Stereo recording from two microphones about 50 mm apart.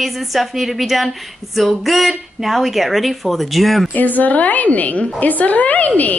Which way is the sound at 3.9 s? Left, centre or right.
Left.